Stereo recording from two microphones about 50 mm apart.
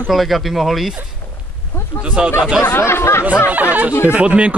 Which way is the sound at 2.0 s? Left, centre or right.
Centre.